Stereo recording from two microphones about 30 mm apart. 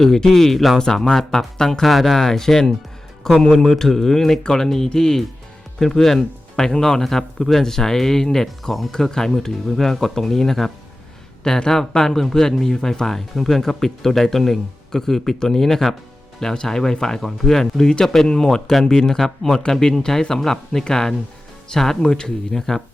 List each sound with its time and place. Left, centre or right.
0.0 s speech: centre
1.8 s speech: centre
6.7 s speech: left
7.0 s speech: centre
11.4 s speech: left
21.7 s speech: left
22.5 s speech: centre